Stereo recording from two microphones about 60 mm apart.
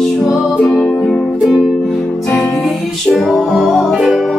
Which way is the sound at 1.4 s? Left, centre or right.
Centre.